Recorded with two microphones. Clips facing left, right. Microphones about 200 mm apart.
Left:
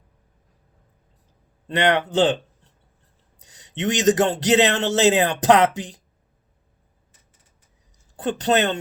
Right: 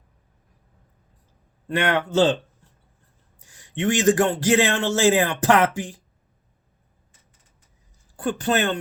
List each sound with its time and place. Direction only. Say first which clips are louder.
1.6 s a man's voice: left 2 dB; 20° left (ahead or behind)
3.3 s a man's voice: right 2 dB; 20° left (ahead or behind)
8.1 s a man's voice: left 2 dB; 20° left (ahead or behind)